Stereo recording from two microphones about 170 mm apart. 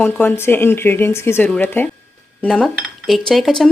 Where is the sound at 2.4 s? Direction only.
5° left (ahead or behind).